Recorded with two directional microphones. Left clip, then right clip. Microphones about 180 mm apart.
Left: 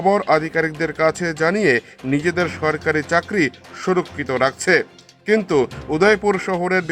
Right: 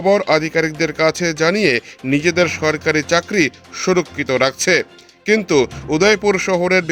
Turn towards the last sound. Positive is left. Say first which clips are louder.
# right 4 dB
turn(degrees=-40)  # may be behind; listen again after turning